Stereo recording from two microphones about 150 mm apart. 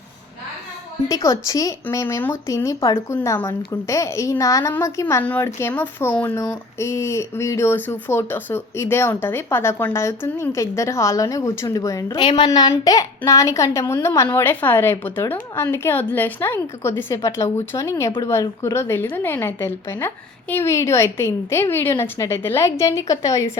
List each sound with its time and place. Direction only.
1.0 s speech: 25° left (ahead or behind)